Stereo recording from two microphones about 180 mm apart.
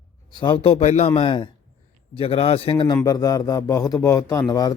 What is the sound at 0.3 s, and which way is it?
A man's voice, 25° left (ahead or behind).